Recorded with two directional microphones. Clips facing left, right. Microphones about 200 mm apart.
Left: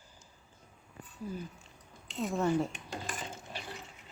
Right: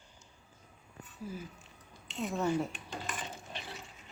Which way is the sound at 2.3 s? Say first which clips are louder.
Left 2 dB; centre (ahead or behind).